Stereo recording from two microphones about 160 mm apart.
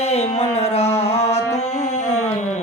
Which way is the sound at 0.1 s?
40° left (ahead or behind).